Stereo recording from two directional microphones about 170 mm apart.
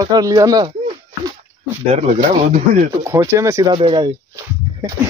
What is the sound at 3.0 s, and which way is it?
Speech, 15° right (ahead or behind).